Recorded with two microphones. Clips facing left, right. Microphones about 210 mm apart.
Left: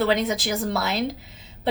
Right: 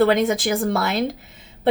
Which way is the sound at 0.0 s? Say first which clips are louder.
Right 5 dB; 50° right (ahead or behind).